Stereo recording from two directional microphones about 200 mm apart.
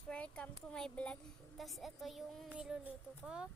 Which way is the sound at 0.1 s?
5° left (ahead or behind).